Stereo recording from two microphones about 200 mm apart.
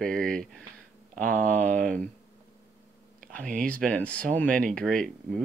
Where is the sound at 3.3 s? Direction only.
5° left (ahead or behind).